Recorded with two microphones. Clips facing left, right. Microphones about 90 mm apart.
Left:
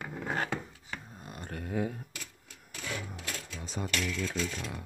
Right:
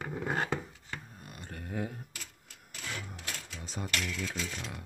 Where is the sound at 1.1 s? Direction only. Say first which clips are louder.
Left 3 dB; 25° left (ahead or behind).